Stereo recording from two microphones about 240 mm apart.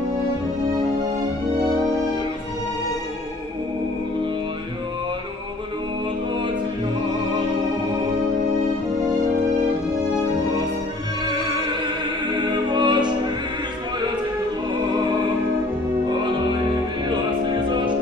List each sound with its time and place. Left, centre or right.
12.7 s music: centre
17.6 s music: centre